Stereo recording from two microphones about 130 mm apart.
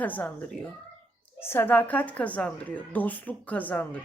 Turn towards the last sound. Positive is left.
turn(degrees=10)  # may be behind; listen again after turning